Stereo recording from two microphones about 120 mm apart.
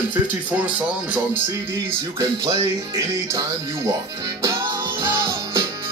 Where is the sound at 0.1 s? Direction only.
10° right (ahead or behind).